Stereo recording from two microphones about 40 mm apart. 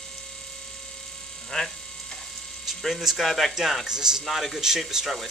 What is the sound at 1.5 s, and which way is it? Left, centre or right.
Speech, centre.